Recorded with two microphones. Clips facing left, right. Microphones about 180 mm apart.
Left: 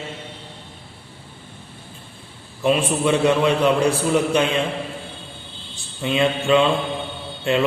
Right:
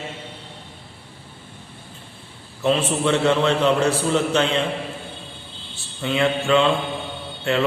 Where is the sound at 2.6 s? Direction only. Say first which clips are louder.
Left 1 dB; 15° left (ahead or behind).